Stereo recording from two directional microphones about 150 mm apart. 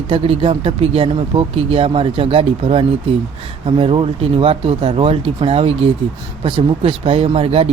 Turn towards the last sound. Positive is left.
turn(degrees=-40)  # may be behind; listen again after turning